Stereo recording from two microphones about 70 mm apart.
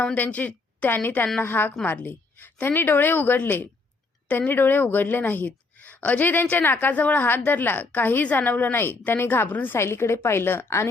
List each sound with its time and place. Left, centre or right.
0.0 s a woman's voice: centre; by 10.8 s left